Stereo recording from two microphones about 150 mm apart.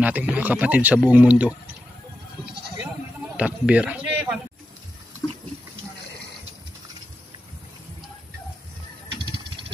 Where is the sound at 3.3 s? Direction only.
10° right (ahead or behind).